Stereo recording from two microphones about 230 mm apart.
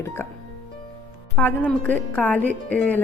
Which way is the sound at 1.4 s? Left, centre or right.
Centre.